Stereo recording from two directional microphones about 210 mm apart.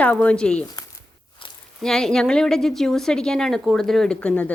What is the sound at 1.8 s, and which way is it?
A woman's voice, centre (ahead or behind).